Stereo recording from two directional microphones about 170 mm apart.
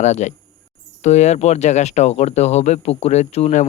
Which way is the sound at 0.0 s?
45° left (ahead or behind).